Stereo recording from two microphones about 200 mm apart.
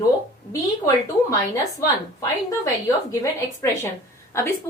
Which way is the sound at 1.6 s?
15° left (ahead or behind).